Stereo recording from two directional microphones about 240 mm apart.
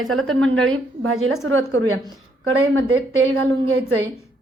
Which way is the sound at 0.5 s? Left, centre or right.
Centre.